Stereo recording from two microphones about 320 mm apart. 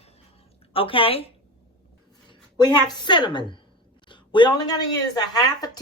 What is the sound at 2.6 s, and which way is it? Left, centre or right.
A woman's voice, centre.